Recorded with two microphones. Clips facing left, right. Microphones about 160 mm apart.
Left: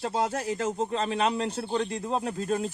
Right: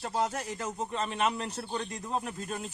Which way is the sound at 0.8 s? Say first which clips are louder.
Left 1 dB; 35° left (ahead or behind).